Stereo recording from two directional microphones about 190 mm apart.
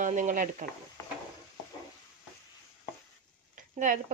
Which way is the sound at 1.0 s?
15° left (ahead or behind).